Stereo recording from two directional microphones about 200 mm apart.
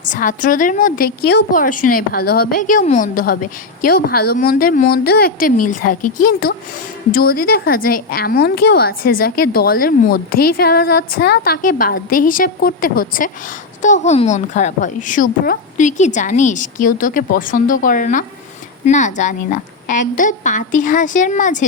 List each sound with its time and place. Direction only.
0.0 s a woman's voice: 40° left (ahead or behind)